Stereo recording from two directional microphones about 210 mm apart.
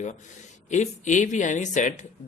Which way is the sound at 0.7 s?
35° left (ahead or behind).